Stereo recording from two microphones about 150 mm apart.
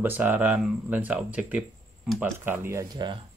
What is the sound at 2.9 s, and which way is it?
Speech, 30° right (ahead or behind).